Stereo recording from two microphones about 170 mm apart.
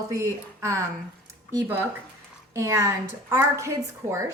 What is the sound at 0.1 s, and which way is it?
Speech, 15° right (ahead or behind).